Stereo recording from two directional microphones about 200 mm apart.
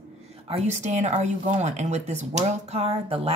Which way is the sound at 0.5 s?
35° right (ahead or behind).